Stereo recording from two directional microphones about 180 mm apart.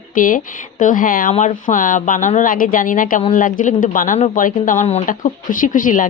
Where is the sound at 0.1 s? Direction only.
50° left (ahead or behind).